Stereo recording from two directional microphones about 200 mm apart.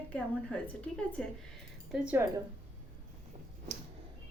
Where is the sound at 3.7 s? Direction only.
35° right (ahead or behind).